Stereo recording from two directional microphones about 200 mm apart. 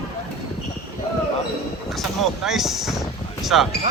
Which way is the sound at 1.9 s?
Centre (ahead or behind).